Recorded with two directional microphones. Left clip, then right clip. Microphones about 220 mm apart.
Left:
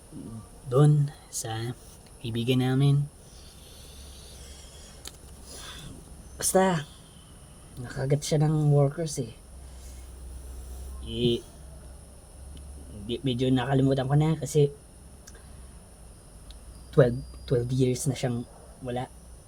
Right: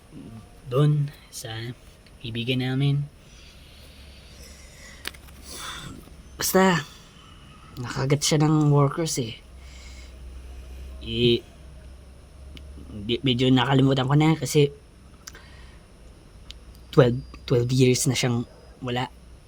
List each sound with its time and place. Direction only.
0.7 s speech: 5° left (ahead or behind)
5.0 s a sound: 30° right (ahead or behind)
6.3 s speech: 30° right (ahead or behind)
11.0 s speech: 35° right (ahead or behind)
13.1 s speech: 40° right (ahead or behind)
16.5 s speech: 40° right (ahead or behind)